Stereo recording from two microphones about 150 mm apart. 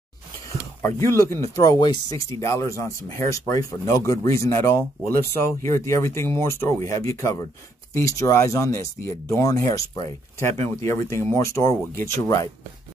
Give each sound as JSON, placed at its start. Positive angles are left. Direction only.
{"t": 0.8, "sound": "speech", "side_deg": 20}